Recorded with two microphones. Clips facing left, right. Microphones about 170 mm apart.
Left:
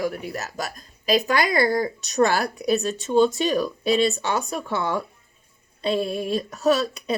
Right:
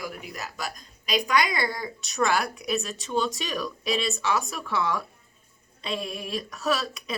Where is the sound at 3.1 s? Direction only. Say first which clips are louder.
Left 9 dB; 30° left (ahead or behind).